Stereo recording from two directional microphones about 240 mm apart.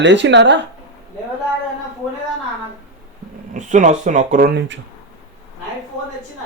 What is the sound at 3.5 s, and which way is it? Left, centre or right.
Speech, right.